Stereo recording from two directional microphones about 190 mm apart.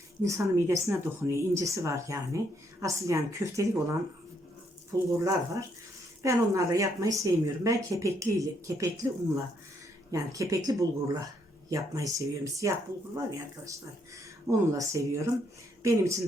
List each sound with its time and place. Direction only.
0.2 s speech: 15° right (ahead or behind)
10.1 s speech: 15° right (ahead or behind)
14.4 s speech: 15° right (ahead or behind)